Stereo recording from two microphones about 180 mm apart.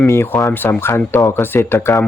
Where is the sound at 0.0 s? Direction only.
15° left (ahead or behind).